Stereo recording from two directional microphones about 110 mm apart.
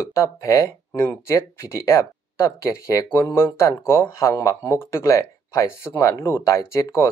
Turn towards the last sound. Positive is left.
turn(degrees=25)  # may be behind; listen again after turning